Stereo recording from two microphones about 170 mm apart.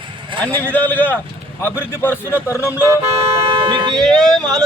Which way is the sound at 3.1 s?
35° right (ahead or behind).